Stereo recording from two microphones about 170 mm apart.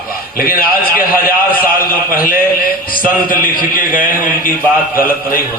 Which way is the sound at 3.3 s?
55° left (ahead or behind).